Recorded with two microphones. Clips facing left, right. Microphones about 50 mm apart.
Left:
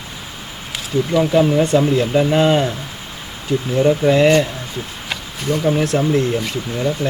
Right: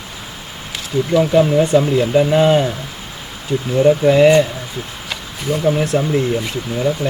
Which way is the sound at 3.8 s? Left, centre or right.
Centre.